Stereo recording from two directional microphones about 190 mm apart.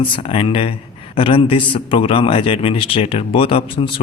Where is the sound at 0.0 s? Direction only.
30° left (ahead or behind).